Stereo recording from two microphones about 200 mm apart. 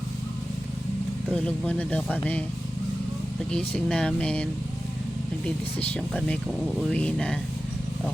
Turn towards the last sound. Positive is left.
turn(degrees=5)  # may be behind; listen again after turning